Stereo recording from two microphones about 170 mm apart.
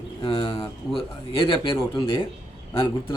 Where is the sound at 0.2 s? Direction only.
30° left (ahead or behind).